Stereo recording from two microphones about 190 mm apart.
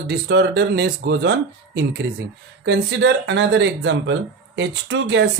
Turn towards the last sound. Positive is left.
turn(degrees=-70)  # may be behind; listen again after turning